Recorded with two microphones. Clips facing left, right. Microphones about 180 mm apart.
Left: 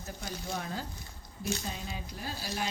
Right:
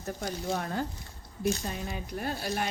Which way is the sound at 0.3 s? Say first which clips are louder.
Right 5 dB; 35° right (ahead or behind).